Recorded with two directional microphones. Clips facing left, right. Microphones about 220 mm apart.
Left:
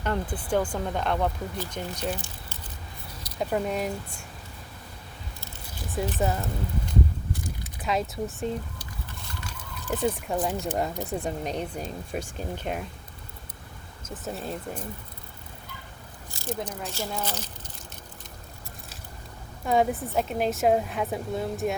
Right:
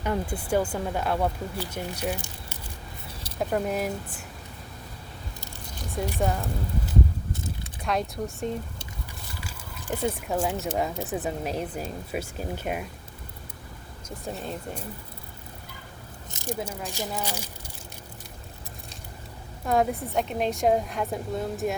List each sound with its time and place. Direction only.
0.0 s speech: 10° right (ahead or behind)
3.3 s a woman's voice: centre (ahead or behind)
6.1 s a woman's voice: centre (ahead or behind)
14.1 s a woman's voice: centre (ahead or behind)
16.3 s biting: 15° right (ahead or behind)
16.6 s speech: 5° right (ahead or behind)
19.6 s a woman's voice: centre (ahead or behind)